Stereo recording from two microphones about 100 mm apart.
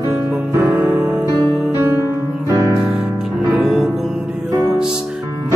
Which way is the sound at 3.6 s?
Centre (ahead or behind).